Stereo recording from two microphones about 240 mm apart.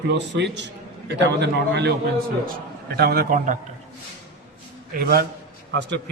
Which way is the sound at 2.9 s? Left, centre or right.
Right.